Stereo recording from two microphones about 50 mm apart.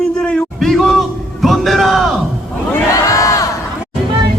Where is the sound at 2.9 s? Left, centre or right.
Left.